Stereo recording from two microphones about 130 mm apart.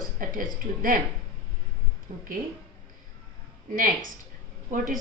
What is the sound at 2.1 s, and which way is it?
Speech, 90° right.